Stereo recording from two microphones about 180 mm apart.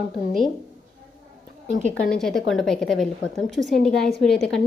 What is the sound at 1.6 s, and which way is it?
Speech, 40° right (ahead or behind).